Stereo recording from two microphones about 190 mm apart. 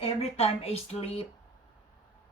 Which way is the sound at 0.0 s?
30° left (ahead or behind).